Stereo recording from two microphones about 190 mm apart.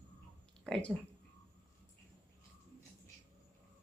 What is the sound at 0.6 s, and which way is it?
Speech, 5° left (ahead or behind).